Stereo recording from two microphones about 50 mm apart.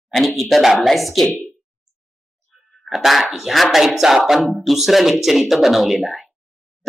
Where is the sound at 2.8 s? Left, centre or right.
Centre.